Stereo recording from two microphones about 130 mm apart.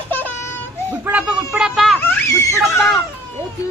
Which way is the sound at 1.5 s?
5° right (ahead or behind).